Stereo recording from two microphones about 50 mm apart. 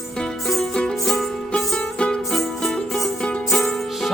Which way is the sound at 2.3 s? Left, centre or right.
Centre.